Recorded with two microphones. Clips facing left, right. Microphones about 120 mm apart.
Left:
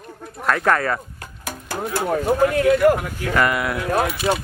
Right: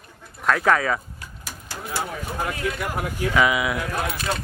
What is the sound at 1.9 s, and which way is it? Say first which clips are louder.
Speech: left 9 dB; 55° left (ahead or behind).